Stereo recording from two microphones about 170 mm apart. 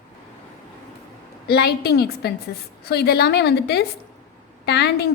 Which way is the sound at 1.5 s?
70° left (ahead or behind).